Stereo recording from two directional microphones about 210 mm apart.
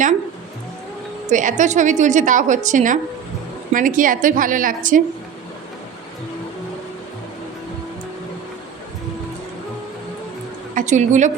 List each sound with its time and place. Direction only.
1.3 s a woman's voice: 35° right (ahead or behind)
10.8 s a woman's voice: 35° right (ahead or behind)